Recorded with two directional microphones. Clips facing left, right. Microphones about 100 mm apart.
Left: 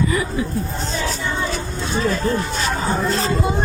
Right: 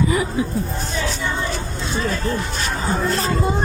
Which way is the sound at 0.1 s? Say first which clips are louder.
Right 1 dB; 25° right (ahead or behind).